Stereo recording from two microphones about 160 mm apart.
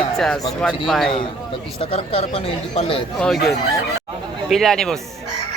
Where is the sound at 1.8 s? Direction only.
35° left (ahead or behind).